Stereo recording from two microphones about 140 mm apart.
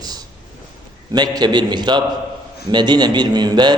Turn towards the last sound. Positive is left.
turn(degrees=-30)  # may be behind; listen again after turning